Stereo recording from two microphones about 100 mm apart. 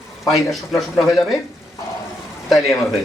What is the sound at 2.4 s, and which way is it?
Speech, centre (ahead or behind).